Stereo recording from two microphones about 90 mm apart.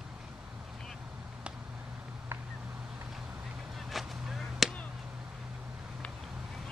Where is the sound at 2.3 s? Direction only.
25° right (ahead or behind).